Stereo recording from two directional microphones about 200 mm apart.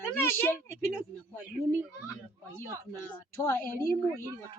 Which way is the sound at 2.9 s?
15° left (ahead or behind).